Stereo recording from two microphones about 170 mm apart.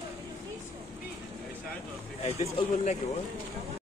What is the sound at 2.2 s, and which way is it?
Speech, 40° left (ahead or behind).